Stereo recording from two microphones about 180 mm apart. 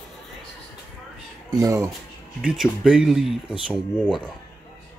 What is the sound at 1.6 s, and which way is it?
Speech, 20° right (ahead or behind).